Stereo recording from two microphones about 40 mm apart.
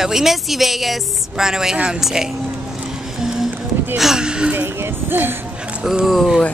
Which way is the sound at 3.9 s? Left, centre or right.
Centre.